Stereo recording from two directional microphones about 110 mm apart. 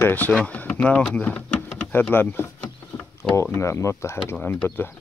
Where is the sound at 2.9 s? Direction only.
15° left (ahead or behind).